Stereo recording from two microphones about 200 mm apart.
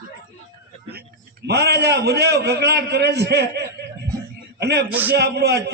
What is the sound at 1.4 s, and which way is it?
A man's voice, 55° right (ahead or behind).